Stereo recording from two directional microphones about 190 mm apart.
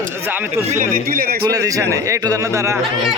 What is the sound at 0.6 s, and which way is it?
Speech, 45° right (ahead or behind).